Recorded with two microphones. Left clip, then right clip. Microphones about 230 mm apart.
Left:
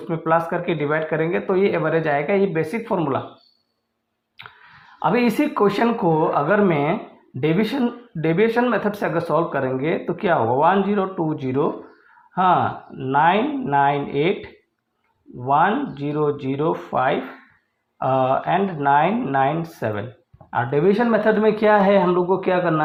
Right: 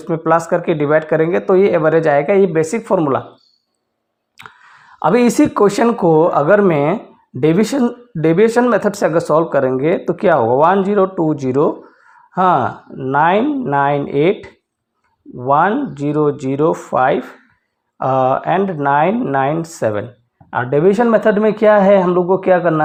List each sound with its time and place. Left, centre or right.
0.1 s speech: right
4.4 s speech: right